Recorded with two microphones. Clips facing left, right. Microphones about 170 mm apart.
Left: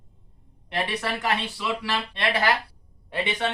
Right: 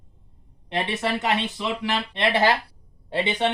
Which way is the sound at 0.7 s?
20° right (ahead or behind).